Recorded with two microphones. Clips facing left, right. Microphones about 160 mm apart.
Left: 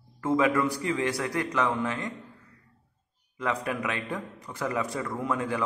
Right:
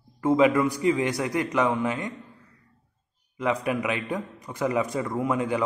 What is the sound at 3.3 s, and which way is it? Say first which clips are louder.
A man's voice: right 4 dB; 15° right (ahead or behind).